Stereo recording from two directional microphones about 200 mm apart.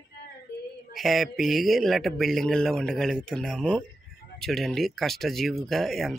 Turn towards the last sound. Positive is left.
turn(degrees=0)  # may be behind; listen again after turning